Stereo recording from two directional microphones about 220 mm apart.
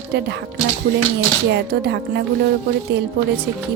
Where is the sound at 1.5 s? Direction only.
50° right (ahead or behind).